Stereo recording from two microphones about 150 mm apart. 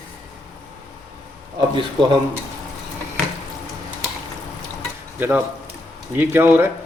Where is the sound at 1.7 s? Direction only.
30° right (ahead or behind).